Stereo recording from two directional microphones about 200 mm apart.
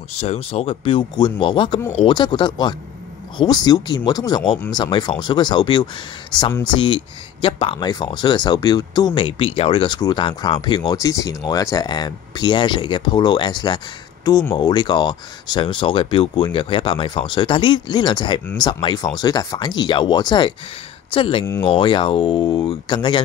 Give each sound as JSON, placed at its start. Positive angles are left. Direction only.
{"t": 0.2, "sound": "speech", "side_deg": 30}